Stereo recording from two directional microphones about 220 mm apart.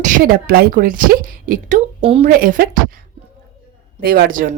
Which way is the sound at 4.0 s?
40° right (ahead or behind).